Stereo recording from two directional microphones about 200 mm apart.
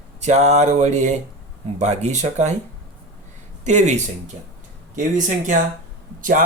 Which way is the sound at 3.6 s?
35° right (ahead or behind).